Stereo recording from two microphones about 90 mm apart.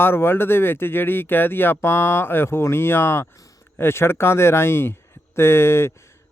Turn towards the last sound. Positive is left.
turn(degrees=30)  # may be behind; listen again after turning